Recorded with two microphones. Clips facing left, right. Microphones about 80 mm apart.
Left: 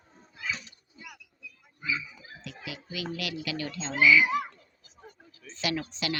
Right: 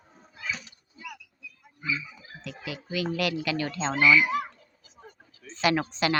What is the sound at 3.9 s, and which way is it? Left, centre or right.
Speech, centre.